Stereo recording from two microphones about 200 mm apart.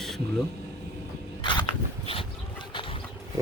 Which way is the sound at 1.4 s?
25° left (ahead or behind).